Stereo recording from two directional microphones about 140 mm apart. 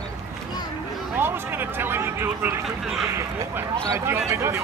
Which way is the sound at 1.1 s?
15° right (ahead or behind).